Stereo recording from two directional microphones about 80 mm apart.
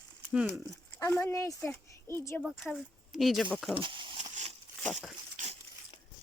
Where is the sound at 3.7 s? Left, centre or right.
Right.